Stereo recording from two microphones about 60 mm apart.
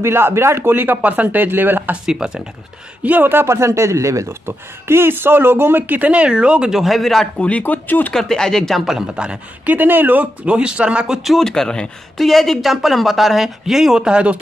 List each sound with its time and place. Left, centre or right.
0.0 s speech: right
2.0 s speech: centre
3.0 s speech: right
3.4 s speech: right
4.5 s speech: right; by 6.8 s centre
6.8 s speech: centre
7.3 s speech: left
8.1 s speech: centre
9.1 s speech: centre
9.7 s speech: right; by 11.1 s centre
11.2 s speech: centre